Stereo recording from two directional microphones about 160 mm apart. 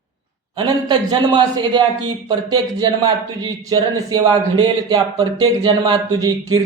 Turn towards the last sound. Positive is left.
turn(degrees=-25)  # may be behind; listen again after turning